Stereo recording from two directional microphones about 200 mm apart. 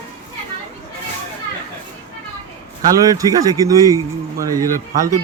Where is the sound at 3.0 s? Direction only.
20° right (ahead or behind).